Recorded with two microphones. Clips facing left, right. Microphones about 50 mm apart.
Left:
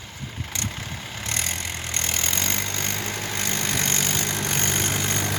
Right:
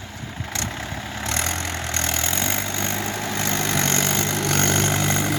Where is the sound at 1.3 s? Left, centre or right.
Right.